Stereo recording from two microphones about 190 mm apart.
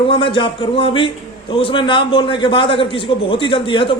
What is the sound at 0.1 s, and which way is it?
A man's voice, 25° left (ahead or behind).